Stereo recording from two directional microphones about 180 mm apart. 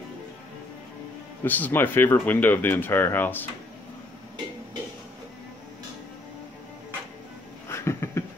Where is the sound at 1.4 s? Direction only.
10° left (ahead or behind).